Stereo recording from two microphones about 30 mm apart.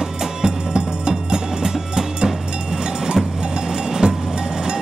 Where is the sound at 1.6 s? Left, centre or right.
Centre.